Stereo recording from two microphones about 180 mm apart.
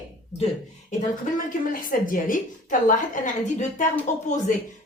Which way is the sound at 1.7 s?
50° left (ahead or behind).